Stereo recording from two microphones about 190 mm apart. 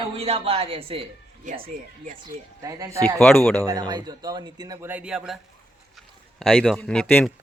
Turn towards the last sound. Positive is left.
turn(degrees=5)  # may be behind; listen again after turning